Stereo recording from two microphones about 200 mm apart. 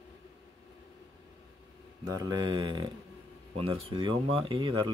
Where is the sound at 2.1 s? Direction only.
20° right (ahead or behind).